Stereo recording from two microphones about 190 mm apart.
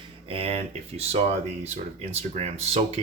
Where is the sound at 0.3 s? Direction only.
30° right (ahead or behind).